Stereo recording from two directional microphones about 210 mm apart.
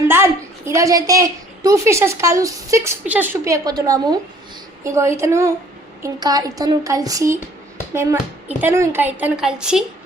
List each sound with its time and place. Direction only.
0.1 s a woman's voice: 10° right (ahead or behind)